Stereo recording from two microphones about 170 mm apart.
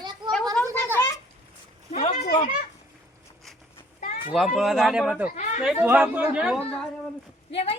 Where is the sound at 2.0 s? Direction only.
40° left (ahead or behind).